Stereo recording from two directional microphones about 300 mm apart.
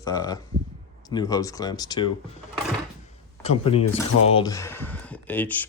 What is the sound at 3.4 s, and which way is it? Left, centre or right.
Speech, centre.